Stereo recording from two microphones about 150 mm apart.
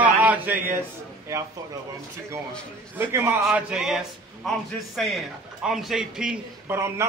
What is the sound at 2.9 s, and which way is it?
Speech, 15° right (ahead or behind).